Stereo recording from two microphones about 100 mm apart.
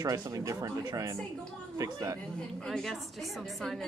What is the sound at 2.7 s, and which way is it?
Speech, 5° left (ahead or behind).